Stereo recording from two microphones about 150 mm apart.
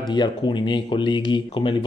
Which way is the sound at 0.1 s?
30° left (ahead or behind).